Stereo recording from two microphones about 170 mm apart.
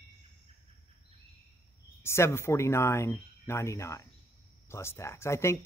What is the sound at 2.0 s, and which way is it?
Speech, 15° left (ahead or behind).